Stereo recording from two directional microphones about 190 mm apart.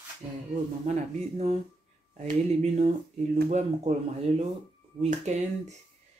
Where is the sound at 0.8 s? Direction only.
35° right (ahead or behind).